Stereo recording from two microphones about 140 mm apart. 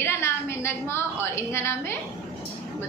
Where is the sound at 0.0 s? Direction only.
20° left (ahead or behind).